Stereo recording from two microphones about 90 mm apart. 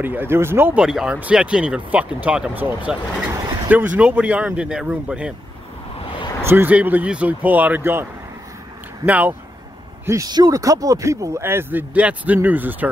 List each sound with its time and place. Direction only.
0.0 s speech: 20° right (ahead or behind)
0.7 s speech: 10° right (ahead or behind)
6.0 s a sound: 65° left (ahead or behind)
6.4 s speech: 20° right (ahead or behind)
10.0 s speech: 35° right (ahead or behind)
11.4 s speech: 25° right (ahead or behind)